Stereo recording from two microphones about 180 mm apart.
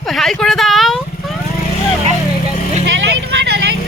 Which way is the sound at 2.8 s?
80° right.